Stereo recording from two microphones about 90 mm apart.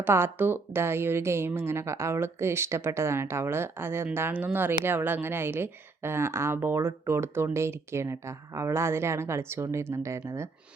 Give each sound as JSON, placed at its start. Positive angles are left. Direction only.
{"t": 0.0, "sound": "speech", "side_deg": -25}